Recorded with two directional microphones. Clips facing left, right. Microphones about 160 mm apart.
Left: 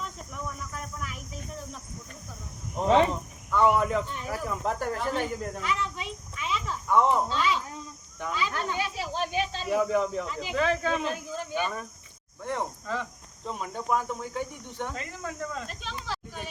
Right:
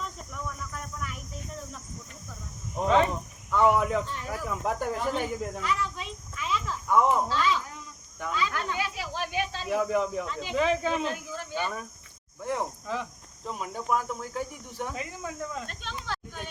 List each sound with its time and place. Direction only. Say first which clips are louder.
0.0 s cricket: even; 5° left (ahead or behind)
3.5 s speech: even; 10° right (ahead or behind)
5.5 s cricket: even; 5° left (ahead or behind)
6.8 s speech: even; 5° right (ahead or behind)
7.3 s speech: right 1 dB; 15° left (ahead or behind)
8.4 s speech: left 1 dB; 25° left (ahead or behind)
9.9 s speech: left 1 dB; 5° right (ahead or behind)
10.2 s speech: even; 5° left (ahead or behind)
10.5 s speech: right 1 dB; 15° right (ahead or behind)
11.1 s speech: left 2 dB; 15° left (ahead or behind)
12.4 s speech: right 1 dB; 5° right (ahead or behind)